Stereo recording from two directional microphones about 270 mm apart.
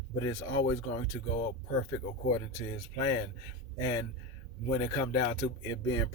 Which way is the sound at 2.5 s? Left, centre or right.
Centre.